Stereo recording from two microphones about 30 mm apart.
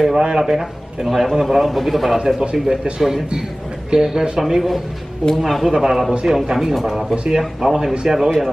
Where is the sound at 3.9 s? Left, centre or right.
Right.